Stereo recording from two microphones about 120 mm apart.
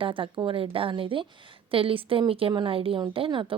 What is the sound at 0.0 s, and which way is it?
A woman's voice, 45° right (ahead or behind).